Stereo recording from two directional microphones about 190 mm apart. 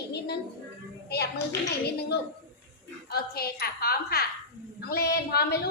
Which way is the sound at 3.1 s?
55° left (ahead or behind).